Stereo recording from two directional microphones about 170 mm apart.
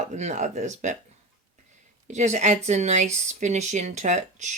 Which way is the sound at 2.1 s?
45° right (ahead or behind).